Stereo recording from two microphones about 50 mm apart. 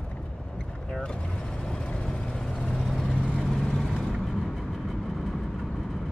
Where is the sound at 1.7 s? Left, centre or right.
Centre.